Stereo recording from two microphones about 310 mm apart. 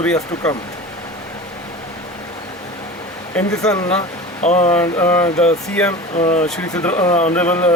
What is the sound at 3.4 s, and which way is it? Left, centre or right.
Speech, centre.